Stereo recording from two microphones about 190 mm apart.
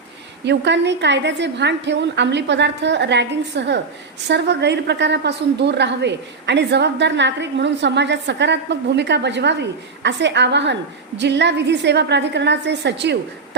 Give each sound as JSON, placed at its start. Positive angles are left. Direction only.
{"t": 0.4, "sound": "a woman's voice", "side_deg": -65}